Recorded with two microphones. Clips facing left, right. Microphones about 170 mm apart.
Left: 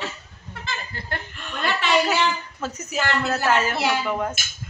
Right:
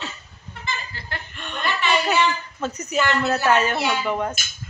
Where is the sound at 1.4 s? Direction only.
5° left (ahead or behind).